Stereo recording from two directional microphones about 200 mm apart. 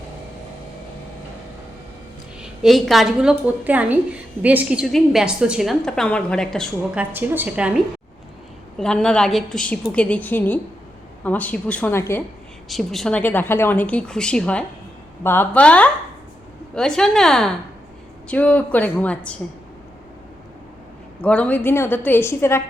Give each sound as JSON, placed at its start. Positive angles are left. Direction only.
{"t": 2.4, "sound": "a woman's voice", "side_deg": 0}
{"t": 7.0, "sound": "a woman's voice", "side_deg": -10}
{"t": 8.8, "sound": "a woman's voice", "side_deg": 5}
{"t": 12.6, "sound": "a woman's voice", "side_deg": 0}
{"t": 21.2, "sound": "speech", "side_deg": 5}